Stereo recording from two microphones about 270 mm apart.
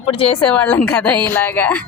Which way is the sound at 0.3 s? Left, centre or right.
Centre.